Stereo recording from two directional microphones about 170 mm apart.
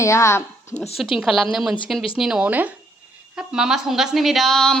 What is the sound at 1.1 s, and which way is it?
Speech, 5° right (ahead or behind).